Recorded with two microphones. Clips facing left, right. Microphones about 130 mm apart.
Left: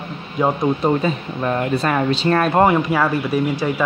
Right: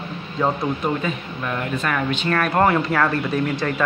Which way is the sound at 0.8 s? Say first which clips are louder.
Left 5 dB; 35° left (ahead or behind).